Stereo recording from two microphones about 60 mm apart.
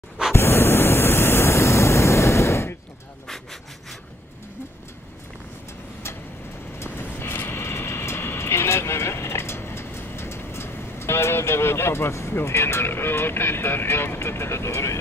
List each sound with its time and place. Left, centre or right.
0.3 s waves: left
6.8 s train: left
12.4 s speech: left